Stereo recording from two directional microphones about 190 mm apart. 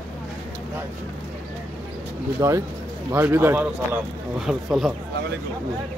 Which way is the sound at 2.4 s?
15° right (ahead or behind).